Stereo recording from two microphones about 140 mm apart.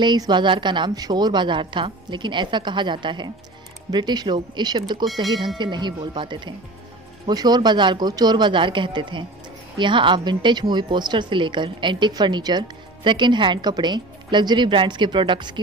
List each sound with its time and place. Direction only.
0.0 s a woman's voice: 30° right (ahead or behind)
5.2 s speech: centre (ahead or behind)
5.6 s a woman's voice: 30° right (ahead or behind)